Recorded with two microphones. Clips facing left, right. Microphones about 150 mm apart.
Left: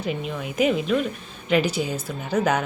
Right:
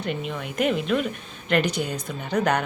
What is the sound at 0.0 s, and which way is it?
A woman's voice, centre (ahead or behind).